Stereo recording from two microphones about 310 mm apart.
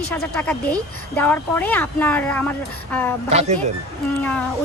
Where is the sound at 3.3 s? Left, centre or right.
Right.